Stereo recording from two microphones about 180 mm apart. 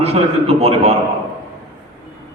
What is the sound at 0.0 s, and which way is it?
Speech, 35° right (ahead or behind).